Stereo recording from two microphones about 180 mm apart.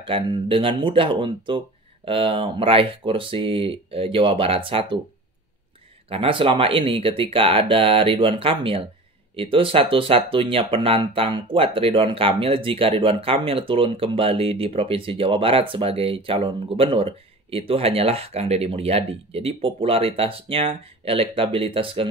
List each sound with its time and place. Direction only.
0.0 s speech: 30° right (ahead or behind)
6.0 s speech: 30° right (ahead or behind)